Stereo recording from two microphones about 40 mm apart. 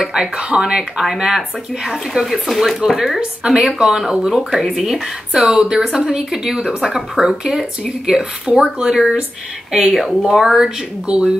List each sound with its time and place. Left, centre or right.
0.1 s speech: centre
1.0 s speech: centre
3.4 s speech: centre
4.3 s speech: centre
5.3 s speech: centre
9.9 s speech: centre
11.1 s speech: right